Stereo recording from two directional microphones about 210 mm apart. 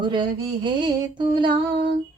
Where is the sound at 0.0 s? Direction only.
20° right (ahead or behind).